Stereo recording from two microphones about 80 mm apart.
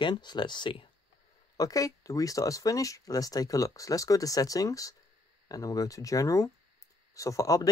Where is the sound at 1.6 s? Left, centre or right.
Left.